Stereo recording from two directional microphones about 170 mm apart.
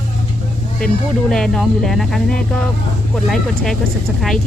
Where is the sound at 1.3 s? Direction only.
5° left (ahead or behind).